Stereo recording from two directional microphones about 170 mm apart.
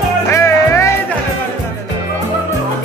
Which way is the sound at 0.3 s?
15° left (ahead or behind).